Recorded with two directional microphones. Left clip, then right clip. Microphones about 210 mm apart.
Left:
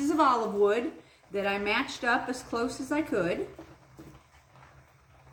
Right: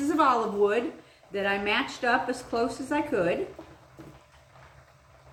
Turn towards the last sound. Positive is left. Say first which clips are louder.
# right 3 dB
turn(degrees=15)  # may be behind; listen again after turning